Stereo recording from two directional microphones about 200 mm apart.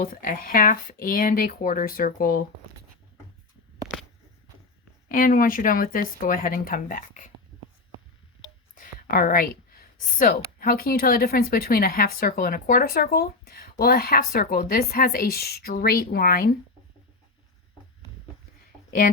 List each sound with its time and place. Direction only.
0.0 s speech: 45° left (ahead or behind)
5.0 s speech: 45° left (ahead or behind)
8.7 s speech: 40° left (ahead or behind)